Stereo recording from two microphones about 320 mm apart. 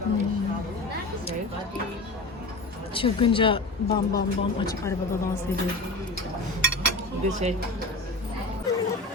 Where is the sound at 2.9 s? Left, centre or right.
Centre.